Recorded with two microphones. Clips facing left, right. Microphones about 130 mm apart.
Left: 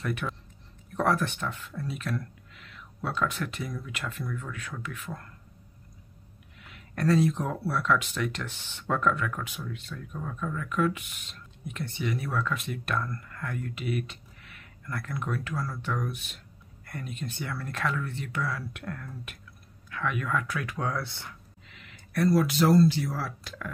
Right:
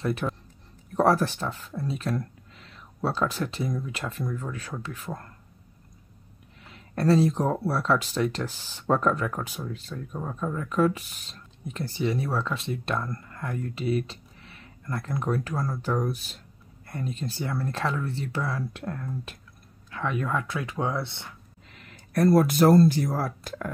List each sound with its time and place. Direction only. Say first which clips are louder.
0.0 s speech: right 5 dB; 30° right (ahead or behind)
6.6 s speech: right 3 dB; 30° right (ahead or behind)
21.6 s speech: right 3 dB; 40° right (ahead or behind)